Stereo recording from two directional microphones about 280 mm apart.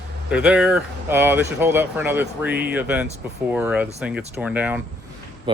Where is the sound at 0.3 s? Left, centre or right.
Centre.